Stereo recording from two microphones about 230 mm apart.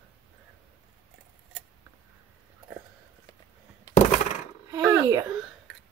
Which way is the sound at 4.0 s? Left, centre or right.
Left.